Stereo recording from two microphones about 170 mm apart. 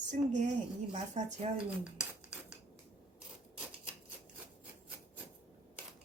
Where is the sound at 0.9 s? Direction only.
45° right (ahead or behind).